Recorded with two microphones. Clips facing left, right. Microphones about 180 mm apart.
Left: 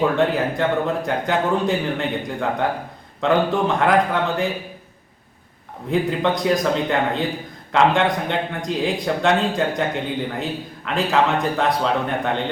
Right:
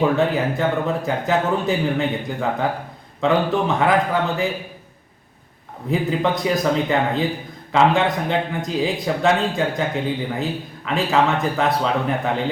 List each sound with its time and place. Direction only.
0.6 s speech: centre (ahead or behind)
5.9 s speech: centre (ahead or behind)